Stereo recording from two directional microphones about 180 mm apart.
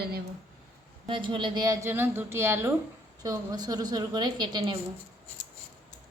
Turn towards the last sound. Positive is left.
turn(degrees=-25)  # may be behind; listen again after turning